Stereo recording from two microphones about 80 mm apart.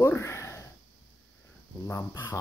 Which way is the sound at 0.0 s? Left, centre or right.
Left.